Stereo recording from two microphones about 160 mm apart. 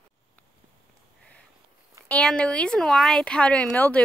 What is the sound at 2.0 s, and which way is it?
Speech, 5° left (ahead or behind).